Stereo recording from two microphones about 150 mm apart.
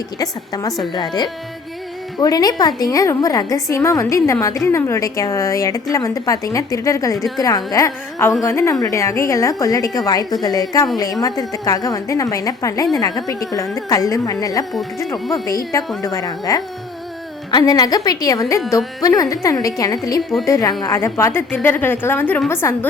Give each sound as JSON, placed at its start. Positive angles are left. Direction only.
{"t": 0.2, "sound": "a woman's voice", "side_deg": 25}